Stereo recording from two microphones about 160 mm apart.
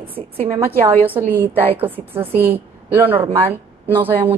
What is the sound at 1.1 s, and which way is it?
A woman's voice, 10° right (ahead or behind).